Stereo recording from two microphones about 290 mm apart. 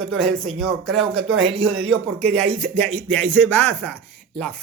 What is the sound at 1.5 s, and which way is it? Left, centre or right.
Speech, centre.